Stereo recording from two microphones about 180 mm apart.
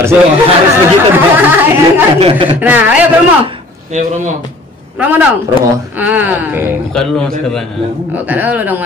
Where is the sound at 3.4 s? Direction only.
30° right (ahead or behind).